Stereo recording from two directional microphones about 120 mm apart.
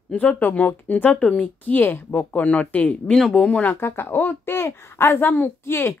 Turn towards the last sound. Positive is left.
turn(degrees=20)  # may be behind; listen again after turning